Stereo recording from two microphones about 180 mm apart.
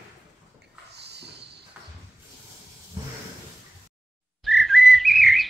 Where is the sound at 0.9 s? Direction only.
65° right (ahead or behind).